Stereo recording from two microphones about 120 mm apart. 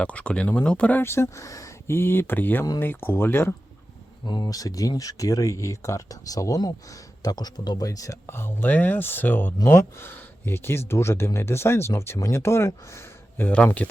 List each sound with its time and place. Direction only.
0.0 s speech: 10° left (ahead or behind)
4.3 s speech: 35° left (ahead or behind); by 13.6 s 15° left (ahead or behind)